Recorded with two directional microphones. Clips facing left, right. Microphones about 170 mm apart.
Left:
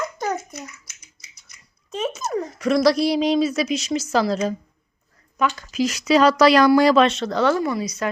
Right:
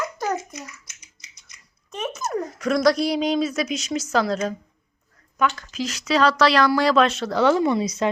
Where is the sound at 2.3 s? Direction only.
Centre (ahead or behind); by 7.0 s 15° left (ahead or behind).